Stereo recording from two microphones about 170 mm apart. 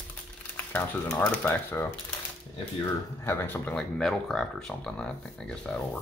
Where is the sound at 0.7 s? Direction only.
10° left (ahead or behind).